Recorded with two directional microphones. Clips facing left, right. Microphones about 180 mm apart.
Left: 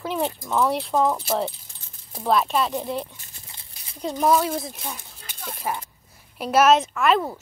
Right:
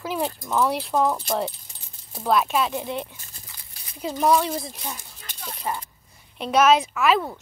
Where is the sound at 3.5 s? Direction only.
25° left (ahead or behind).